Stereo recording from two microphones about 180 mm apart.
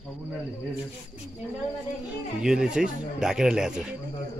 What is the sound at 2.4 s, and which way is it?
Speech, 5° right (ahead or behind).